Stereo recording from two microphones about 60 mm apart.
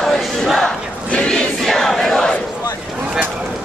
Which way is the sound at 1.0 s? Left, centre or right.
Centre.